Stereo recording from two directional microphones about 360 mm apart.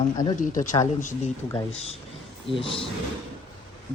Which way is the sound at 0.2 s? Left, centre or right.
Centre.